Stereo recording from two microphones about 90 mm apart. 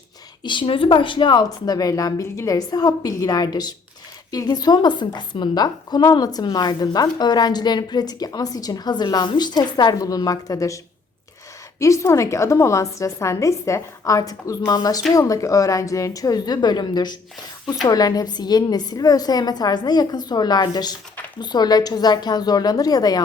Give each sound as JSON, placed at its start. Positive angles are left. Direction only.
{"t": 0.4, "sound": "a woman's voice", "side_deg": 65}
{"t": 11.8, "sound": "a woman's voice", "side_deg": 35}